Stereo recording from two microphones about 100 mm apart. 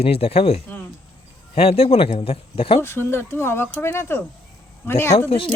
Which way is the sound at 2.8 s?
25° left (ahead or behind).